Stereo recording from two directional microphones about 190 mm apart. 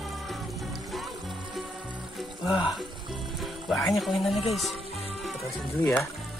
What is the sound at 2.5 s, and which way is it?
Speech, 5° right (ahead or behind).